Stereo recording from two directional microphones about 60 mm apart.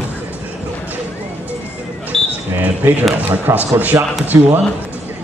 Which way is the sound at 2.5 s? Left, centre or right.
Right.